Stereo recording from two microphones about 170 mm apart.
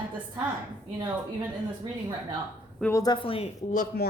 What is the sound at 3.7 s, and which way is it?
Speech, 50° left (ahead or behind).